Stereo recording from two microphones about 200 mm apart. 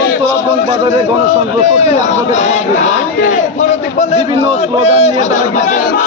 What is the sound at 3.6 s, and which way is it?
A man's voice, 35° left (ahead or behind).